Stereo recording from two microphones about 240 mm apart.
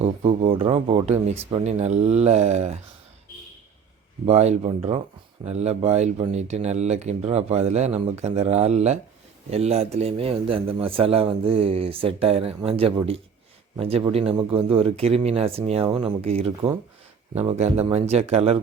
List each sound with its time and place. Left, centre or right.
0.0 s speech: right
4.3 s speech: right